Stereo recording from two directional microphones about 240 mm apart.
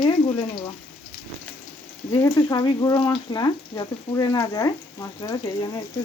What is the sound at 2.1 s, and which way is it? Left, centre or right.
Frying, centre.